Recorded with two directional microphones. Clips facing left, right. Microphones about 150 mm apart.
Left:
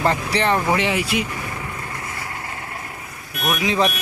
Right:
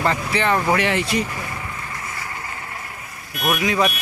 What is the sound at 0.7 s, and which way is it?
Speech, 15° left (ahead or behind).